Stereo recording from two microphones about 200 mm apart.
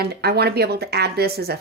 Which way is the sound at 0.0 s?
55° right (ahead or behind).